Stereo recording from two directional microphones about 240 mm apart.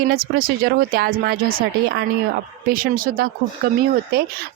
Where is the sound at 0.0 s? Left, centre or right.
Right.